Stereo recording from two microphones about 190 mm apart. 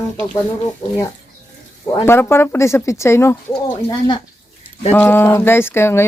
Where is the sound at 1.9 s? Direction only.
15° left (ahead or behind).